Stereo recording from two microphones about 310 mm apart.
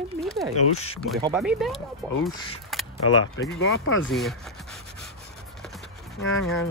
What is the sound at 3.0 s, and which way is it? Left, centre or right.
Speech, left.